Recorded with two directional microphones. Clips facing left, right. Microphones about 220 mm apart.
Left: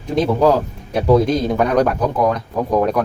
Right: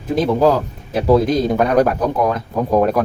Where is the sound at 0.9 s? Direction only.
Centre (ahead or behind).